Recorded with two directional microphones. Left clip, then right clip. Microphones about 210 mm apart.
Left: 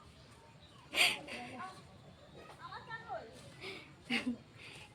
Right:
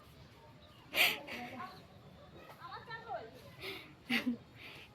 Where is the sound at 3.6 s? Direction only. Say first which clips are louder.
Right 2 dB; 20° right (ahead or behind).